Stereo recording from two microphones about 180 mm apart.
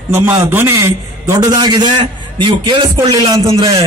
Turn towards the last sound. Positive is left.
turn(degrees=-30)  # may be behind; listen again after turning